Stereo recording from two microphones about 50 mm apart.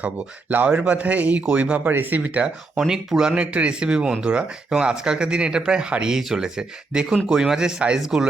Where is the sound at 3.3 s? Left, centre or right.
Right.